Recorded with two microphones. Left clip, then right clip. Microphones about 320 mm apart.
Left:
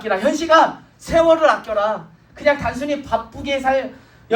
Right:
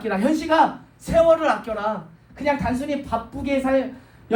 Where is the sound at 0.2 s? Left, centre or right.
Left.